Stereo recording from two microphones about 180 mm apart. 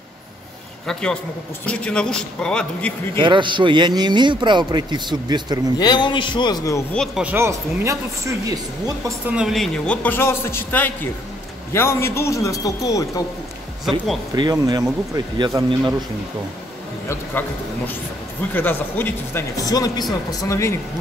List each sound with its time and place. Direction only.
1.7 s a man's voice: 5° left (ahead or behind)
3.2 s a man's voice: 25° right (ahead or behind)
5.8 s a man's voice: 25° left (ahead or behind)
6.9 s a man's voice: 5° left (ahead or behind)
7.2 s speech: 15° right (ahead or behind)
9.3 s speech: centre (ahead or behind); by 13.2 s 20° left (ahead or behind)
14.3 s a man's voice: 25° right (ahead or behind)
17.1 s speech: 10° left (ahead or behind)